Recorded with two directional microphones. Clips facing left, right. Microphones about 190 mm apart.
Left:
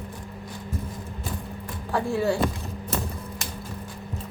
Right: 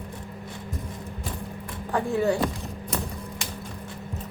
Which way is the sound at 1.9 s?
15° right (ahead or behind).